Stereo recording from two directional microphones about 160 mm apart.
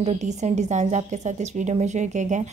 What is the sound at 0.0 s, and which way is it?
A woman's voice, 45° right (ahead or behind).